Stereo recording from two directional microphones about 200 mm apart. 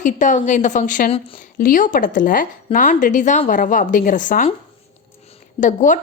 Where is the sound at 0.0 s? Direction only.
40° left (ahead or behind).